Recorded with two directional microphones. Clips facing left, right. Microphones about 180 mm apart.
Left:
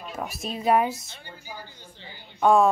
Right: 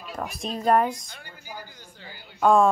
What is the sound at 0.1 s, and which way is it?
Speech, 5° left (ahead or behind).